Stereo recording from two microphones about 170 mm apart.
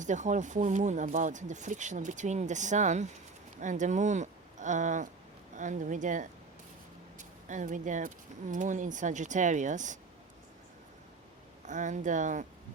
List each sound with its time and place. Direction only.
0.0 s speech: 45° right (ahead or behind)
11.6 s speech: 45° right (ahead or behind)